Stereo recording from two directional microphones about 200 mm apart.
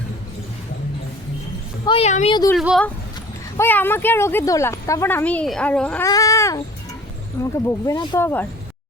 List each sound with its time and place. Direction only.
1.8 s speech: 25° left (ahead or behind)
2.3 s speech: 20° left (ahead or behind)
2.6 s speech: centre (ahead or behind)
6.1 s speech: 15° left (ahead or behind)